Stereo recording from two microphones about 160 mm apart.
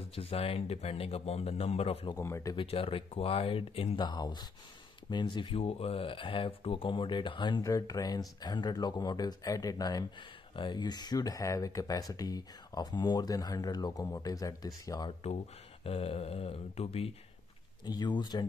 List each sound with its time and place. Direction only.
0.1 s speech: 35° left (ahead or behind)
2.1 s speech: 20° left (ahead or behind)
2.5 s speech: 35° left (ahead or behind)
17.8 s speech: 25° left (ahead or behind)